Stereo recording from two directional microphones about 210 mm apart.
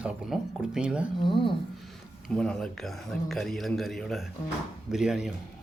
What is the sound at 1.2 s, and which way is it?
Speech, 25° left (ahead or behind).